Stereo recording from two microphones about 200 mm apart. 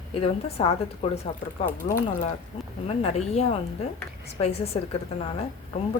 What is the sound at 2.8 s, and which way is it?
Speech, 30° left (ahead or behind).